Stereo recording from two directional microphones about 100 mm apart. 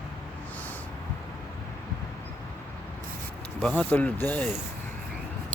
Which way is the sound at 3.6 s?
15° left (ahead or behind).